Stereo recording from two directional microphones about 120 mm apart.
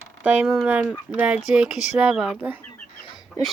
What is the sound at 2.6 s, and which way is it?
Chicken, 15° left (ahead or behind).